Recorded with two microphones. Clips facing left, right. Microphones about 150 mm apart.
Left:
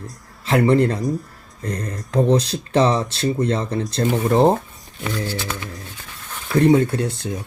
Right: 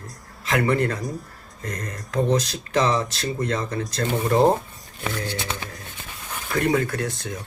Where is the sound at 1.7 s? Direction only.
30° left (ahead or behind).